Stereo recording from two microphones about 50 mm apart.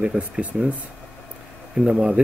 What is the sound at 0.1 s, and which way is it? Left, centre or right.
Speech, right.